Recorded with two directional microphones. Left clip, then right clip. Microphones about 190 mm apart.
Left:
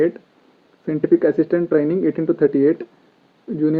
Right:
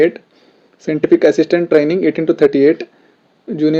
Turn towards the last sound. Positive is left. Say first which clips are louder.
# right 5 dB
turn(degrees=-35)  # may be behind; listen again after turning